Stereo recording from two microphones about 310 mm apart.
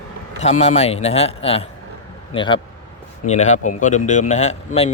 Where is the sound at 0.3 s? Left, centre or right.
Left.